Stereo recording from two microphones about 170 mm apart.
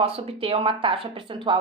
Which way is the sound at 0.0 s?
35° right (ahead or behind).